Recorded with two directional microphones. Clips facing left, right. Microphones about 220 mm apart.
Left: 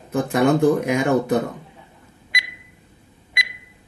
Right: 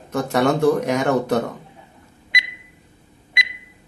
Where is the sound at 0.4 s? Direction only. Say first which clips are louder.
Left 1 dB; 5° left (ahead or behind).